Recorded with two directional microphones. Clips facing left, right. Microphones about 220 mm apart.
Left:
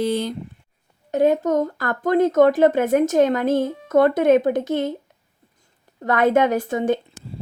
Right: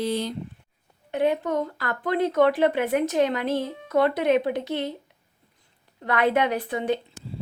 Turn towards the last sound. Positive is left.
turn(degrees=45)  # may be behind; listen again after turning